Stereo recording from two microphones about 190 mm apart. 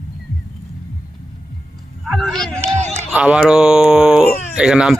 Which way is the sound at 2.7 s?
35° right (ahead or behind).